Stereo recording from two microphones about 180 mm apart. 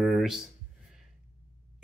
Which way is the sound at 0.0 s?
Centre (ahead or behind).